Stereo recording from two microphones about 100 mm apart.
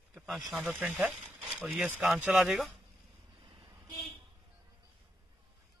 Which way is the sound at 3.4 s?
55° right (ahead or behind).